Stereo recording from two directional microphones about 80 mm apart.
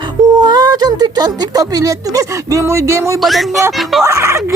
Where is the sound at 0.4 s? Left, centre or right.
Right.